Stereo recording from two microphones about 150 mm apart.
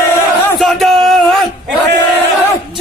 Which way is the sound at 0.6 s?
Centre (ahead or behind).